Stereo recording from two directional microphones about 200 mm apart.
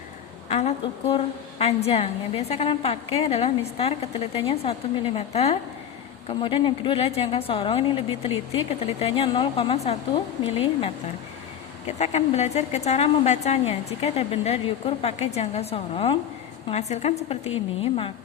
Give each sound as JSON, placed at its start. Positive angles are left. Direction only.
{"t": 0.4, "sound": "a woman's voice", "side_deg": 30}